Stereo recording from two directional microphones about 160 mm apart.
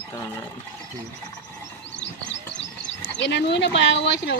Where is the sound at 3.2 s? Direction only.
90° left.